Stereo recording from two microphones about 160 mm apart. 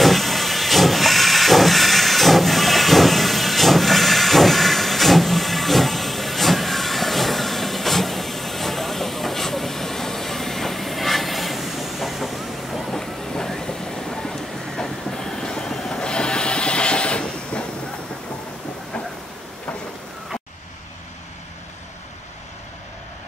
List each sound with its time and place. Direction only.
0.0 s hiss: centre (ahead or behind)